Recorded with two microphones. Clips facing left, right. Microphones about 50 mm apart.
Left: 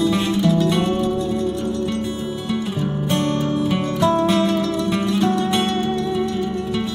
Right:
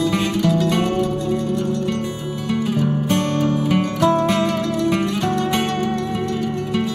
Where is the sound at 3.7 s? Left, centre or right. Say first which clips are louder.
Right 1 dB; right.